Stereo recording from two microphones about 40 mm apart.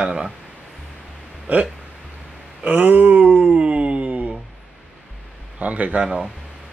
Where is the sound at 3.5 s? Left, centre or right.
Right.